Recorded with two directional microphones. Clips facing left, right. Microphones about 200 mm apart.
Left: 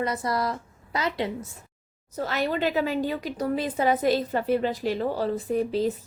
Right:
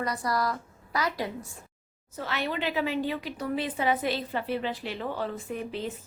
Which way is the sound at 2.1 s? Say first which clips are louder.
Left 5 dB; 40° left (ahead or behind).